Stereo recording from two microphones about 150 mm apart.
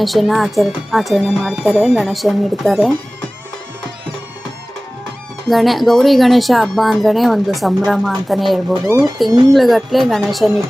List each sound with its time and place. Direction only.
0.0 s speech: centre (ahead or behind)
5.5 s speech: centre (ahead or behind)
8.7 s speech: 20° right (ahead or behind)
9.5 s speech: centre (ahead or behind)